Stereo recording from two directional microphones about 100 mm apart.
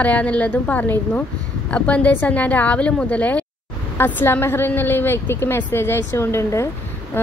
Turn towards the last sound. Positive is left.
turn(degrees=20)  # may be behind; listen again after turning